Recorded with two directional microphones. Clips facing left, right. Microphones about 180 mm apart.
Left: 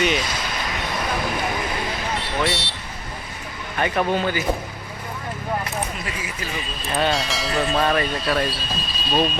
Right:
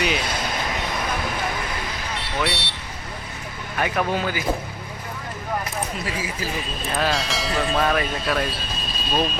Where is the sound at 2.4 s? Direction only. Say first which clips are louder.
Left 2 dB; 65° right (ahead or behind).